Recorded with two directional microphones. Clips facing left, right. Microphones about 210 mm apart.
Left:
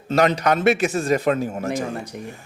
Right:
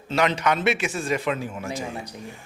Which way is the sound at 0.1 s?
40° left (ahead or behind).